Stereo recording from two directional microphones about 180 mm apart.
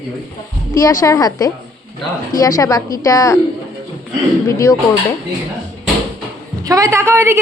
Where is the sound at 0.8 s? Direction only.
15° left (ahead or behind).